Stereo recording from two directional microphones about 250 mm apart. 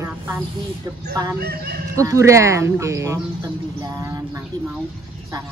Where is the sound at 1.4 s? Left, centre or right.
Right.